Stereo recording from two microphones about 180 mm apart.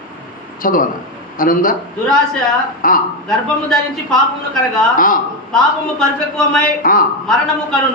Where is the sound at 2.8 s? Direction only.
50° left (ahead or behind).